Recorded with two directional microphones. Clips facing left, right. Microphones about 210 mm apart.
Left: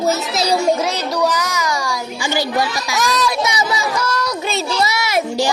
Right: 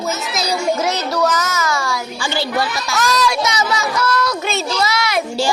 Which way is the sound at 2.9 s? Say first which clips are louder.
Right 1 dB; 15° left (ahead or behind).